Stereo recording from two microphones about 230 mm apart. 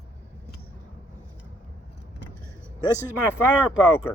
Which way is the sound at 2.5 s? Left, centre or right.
Centre.